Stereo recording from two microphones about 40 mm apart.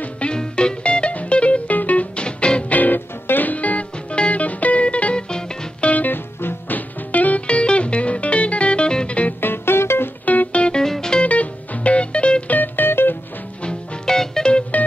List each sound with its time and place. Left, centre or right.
0.3 s music: left
2.1 s music: left
2.7 s music: left
3.5 s music: left
5.8 s music: left
6.1 s music: left
7.1 s music: left
9.4 s music: left
10.2 s music: left
10.5 s music: left
10.8 s music: centre
11.2 s music: left
12.4 s music: left
14.0 s music: centre